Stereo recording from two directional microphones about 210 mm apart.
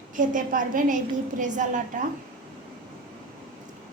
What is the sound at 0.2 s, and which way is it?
Speech, 40° right (ahead or behind).